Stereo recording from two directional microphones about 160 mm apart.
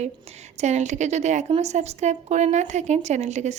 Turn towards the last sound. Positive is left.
turn(degrees=-45)  # may be behind; listen again after turning